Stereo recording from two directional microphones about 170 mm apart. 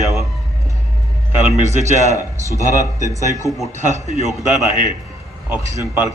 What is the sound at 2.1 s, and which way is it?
Speech, 20° left (ahead or behind).